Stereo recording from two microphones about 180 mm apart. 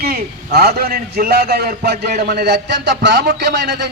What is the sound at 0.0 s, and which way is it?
A man's voice, 60° right (ahead or behind).